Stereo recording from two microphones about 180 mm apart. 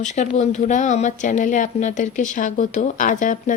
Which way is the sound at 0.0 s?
40° left (ahead or behind).